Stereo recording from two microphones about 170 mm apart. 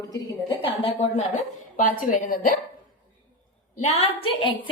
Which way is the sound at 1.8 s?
50° left (ahead or behind).